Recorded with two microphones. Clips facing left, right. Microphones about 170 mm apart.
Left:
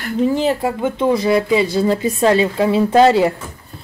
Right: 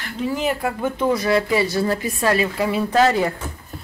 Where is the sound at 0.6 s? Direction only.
20° left (ahead or behind).